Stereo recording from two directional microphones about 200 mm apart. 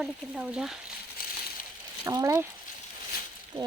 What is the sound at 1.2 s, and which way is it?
Crushing, 50° left (ahead or behind).